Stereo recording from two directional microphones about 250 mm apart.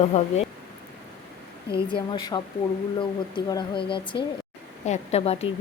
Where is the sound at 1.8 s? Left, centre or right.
Centre.